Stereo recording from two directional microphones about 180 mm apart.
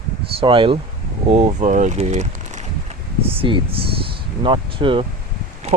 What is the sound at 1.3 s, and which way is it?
Speech, 40° right (ahead or behind).